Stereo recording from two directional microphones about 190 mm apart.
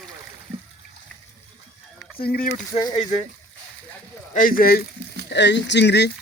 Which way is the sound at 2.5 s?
20° left (ahead or behind).